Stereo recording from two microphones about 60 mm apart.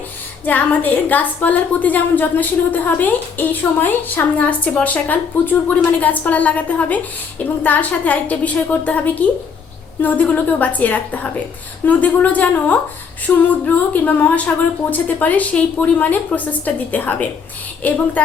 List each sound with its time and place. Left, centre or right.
0.4 s a woman's voice: left